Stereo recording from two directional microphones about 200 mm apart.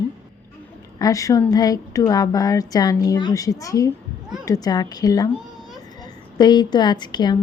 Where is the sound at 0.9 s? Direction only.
15° left (ahead or behind).